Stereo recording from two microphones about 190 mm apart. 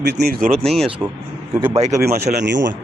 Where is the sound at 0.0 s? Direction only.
55° right (ahead or behind).